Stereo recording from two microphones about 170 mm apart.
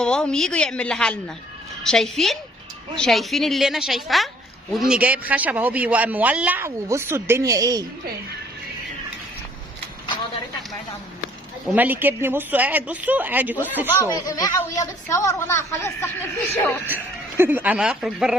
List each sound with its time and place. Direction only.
0.0 s a woman's voice: 5° left (ahead or behind); by 7.9 s 20° right (ahead or behind)
11.6 s speech: 10° right (ahead or behind)
13.9 s speech: 20° left (ahead or behind)
16.8 s speech: 10° right (ahead or behind)